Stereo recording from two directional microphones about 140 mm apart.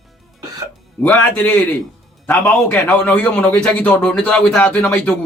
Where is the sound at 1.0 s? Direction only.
15° left (ahead or behind).